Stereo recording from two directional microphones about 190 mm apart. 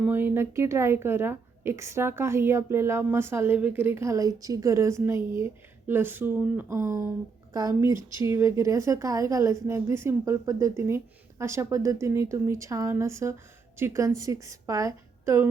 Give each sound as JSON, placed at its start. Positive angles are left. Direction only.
{"t": 0.0, "sound": "a woman's voice", "side_deg": -10}